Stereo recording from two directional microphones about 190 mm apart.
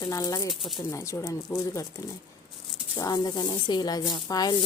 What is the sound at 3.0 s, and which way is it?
Speech, 20° left (ahead or behind).